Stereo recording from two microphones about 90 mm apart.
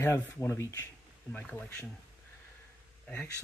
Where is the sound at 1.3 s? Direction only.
15° left (ahead or behind).